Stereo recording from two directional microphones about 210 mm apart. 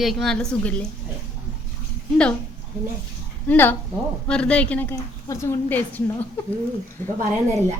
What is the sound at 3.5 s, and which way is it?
A woman's voice, 10° left (ahead or behind).